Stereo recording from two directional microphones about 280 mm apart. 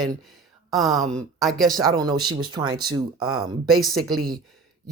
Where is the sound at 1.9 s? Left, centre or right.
Centre.